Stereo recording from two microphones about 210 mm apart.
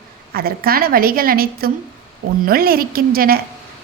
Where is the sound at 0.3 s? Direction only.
45° right (ahead or behind).